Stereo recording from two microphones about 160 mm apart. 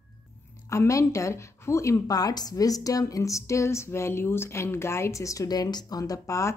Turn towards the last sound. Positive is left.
turn(degrees=20)  # may be behind; listen again after turning